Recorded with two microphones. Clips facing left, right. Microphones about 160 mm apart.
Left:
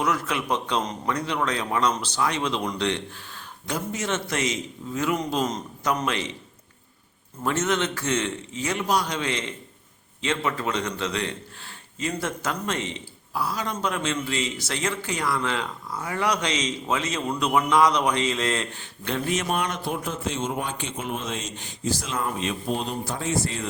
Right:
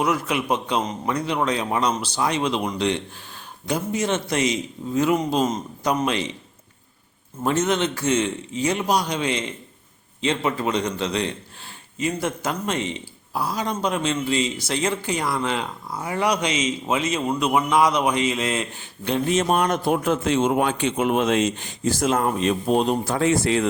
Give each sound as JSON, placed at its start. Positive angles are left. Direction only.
{"t": 0.0, "sound": "a man's voice", "side_deg": -15}
{"t": 7.4, "sound": "a man's voice", "side_deg": -15}
{"t": 19.5, "sound": "a man's voice", "side_deg": -45}
{"t": 21.8, "sound": "speech", "side_deg": -50}
{"t": 22.7, "sound": "a man's voice", "side_deg": -60}